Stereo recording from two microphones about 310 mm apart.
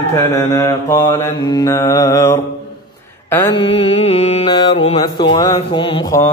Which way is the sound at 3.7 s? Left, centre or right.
Centre.